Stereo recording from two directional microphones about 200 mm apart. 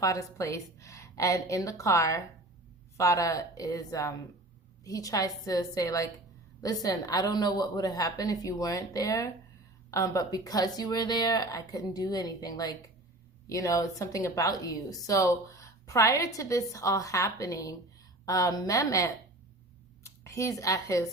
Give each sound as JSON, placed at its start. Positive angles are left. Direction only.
{"t": 0.0, "sound": "a woman's voice", "side_deg": 15}